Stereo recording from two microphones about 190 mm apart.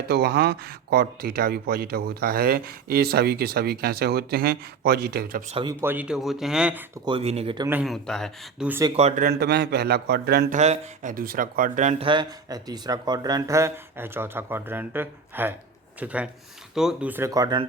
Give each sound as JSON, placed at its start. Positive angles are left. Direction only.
{"t": 0.1, "sound": "speech", "side_deg": -60}
{"t": 5.5, "sound": "speech", "side_deg": -30}
{"t": 5.8, "sound": "speech", "side_deg": -10}
{"t": 7.0, "sound": "speech", "side_deg": -30}
{"t": 7.7, "sound": "speech", "side_deg": -5}
{"t": 9.0, "sound": "speech", "side_deg": -35}
{"t": 9.2, "sound": "speech", "side_deg": -60}
{"t": 10.5, "sound": "speech", "side_deg": -40}